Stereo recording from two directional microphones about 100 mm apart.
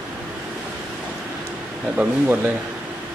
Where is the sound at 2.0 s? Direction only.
15° right (ahead or behind).